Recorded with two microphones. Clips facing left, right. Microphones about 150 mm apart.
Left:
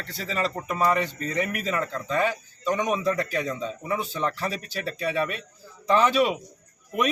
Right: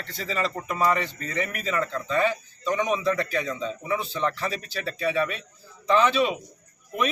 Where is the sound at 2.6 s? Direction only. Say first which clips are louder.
Even; 5° left (ahead or behind).